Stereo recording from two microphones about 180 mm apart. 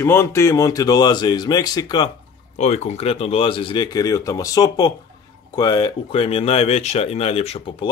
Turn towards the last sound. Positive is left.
turn(degrees=30)  # may be behind; listen again after turning